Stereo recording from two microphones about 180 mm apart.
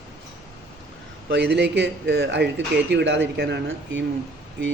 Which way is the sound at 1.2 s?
65° right (ahead or behind).